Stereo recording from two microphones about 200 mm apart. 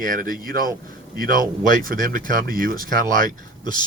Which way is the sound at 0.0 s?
45° right (ahead or behind).